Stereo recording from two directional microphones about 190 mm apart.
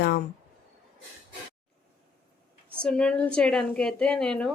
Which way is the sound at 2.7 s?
5° left (ahead or behind).